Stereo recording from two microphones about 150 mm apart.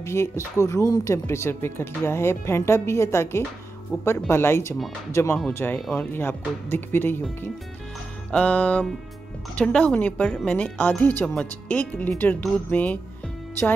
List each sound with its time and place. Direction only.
0.0 s speech: 20° left (ahead or behind)
5.8 s speech: 5° left (ahead or behind)
6.1 s speech: 15° left (ahead or behind)
8.3 s speech: 5° left (ahead or behind)